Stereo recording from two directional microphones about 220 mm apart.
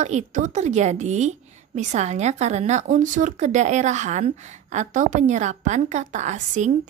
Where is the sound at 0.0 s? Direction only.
30° right (ahead or behind).